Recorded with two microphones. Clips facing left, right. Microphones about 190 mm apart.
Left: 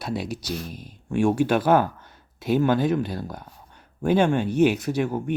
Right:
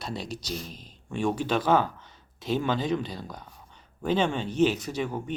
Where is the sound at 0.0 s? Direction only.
10° left (ahead or behind).